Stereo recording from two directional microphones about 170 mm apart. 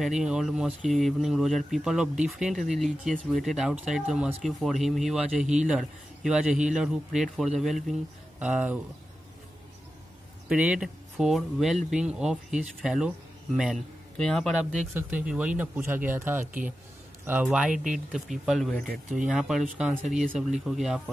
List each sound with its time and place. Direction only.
0.0 s speech: 5° right (ahead or behind)
10.5 s speech: 5° right (ahead or behind)
14.1 s speech: 5° left (ahead or behind)
20.2 s speech: 45° right (ahead or behind)
20.6 s speech: 5° right (ahead or behind)